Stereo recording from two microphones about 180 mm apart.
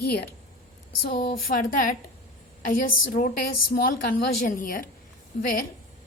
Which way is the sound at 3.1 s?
50° left (ahead or behind).